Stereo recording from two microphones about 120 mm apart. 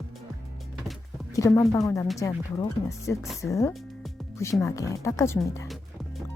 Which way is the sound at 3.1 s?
20° left (ahead or behind).